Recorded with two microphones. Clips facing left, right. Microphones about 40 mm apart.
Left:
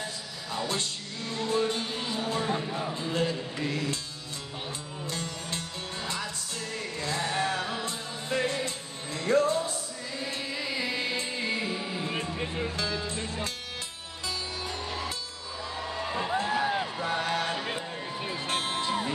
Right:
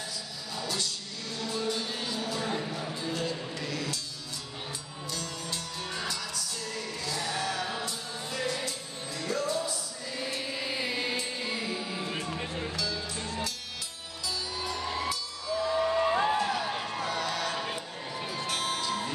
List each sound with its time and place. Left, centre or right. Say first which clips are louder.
0.5 s music: left 3 dB; left
5.0 s music: left 1 dB; left
10.6 s music: left 2 dB; centre
11.4 s music: left 3 dB; left
12.4 s music: left 3 dB; centre
12.7 s music: left 2 dB; left
15.9 s a sound: right 5 dB; centre
16.3 s a sound: left 2 dB; left
17.0 s music: left 1 dB; left